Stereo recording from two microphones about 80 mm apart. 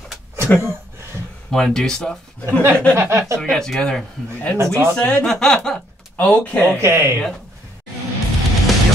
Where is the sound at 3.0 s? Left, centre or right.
Right.